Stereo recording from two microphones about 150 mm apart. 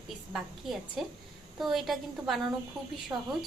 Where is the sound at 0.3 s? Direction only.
Centre (ahead or behind).